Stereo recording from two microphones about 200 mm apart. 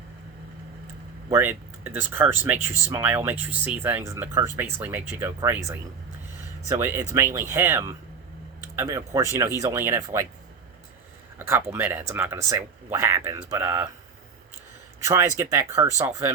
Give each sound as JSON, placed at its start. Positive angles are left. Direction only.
{"t": 1.3, "sound": "speech", "side_deg": -10}
{"t": 6.7, "sound": "speech", "side_deg": -10}
{"t": 11.3, "sound": "speech", "side_deg": -15}
{"t": 15.0, "sound": "speech", "side_deg": -15}